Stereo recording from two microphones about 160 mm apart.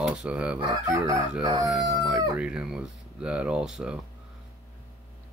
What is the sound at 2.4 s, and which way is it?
Speech, 5° right (ahead or behind).